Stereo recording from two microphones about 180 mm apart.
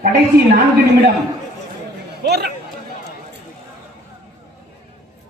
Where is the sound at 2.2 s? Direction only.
65° right (ahead or behind).